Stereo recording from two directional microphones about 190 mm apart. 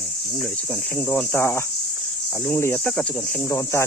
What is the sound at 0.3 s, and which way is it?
Speech, 5° left (ahead or behind).